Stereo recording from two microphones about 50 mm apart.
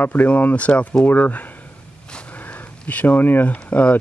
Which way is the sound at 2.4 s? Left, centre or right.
Left.